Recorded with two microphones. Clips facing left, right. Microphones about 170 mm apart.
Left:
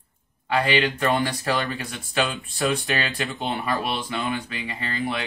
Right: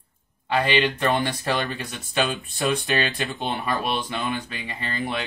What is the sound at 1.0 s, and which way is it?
Speech, 25° right (ahead or behind).